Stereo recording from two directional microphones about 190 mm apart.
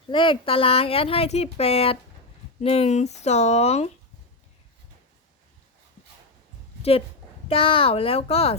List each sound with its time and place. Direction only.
0.1 s speech: 25° left (ahead or behind)
7.4 s speech: 30° left (ahead or behind)